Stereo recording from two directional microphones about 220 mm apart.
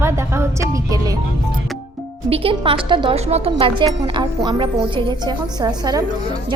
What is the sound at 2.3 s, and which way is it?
A woman's voice, 25° right (ahead or behind).